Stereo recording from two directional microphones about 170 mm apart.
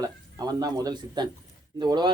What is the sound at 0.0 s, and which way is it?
Speech, 20° right (ahead or behind).